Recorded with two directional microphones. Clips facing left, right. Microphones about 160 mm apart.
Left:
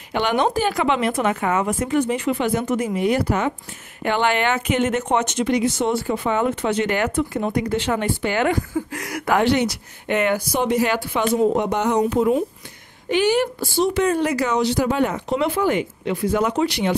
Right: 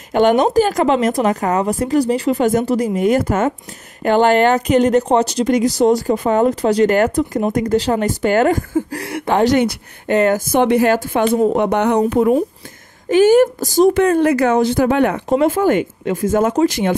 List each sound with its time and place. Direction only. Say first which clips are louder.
0.1 s speech: right 7 dB; 45° right (ahead or behind)
9.0 s speech: right 3 dB; 30° right (ahead or behind)
9.5 s speech: right 4 dB; 45° right (ahead or behind)
10.6 s speech: right 6 dB; 60° right (ahead or behind)
10.9 s speech: right 7 dB; 45° right (ahead or behind)
11.3 s speech: right 2 dB; 60° right (ahead or behind)
13.1 s speech: right 8 dB; 45° right (ahead or behind); by 15.3 s 60° right (ahead or behind)
15.3 s speech: right 6 dB; 45° right (ahead or behind)